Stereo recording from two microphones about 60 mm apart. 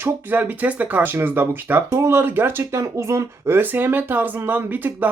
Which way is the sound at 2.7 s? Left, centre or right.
Right.